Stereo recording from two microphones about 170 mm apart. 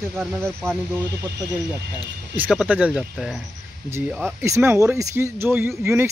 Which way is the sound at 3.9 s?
15° right (ahead or behind).